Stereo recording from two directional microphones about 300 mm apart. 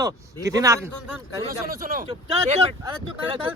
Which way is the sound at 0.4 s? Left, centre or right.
Centre.